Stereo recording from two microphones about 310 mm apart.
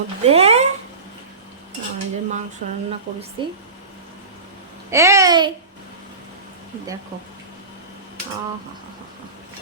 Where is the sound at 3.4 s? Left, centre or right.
Centre.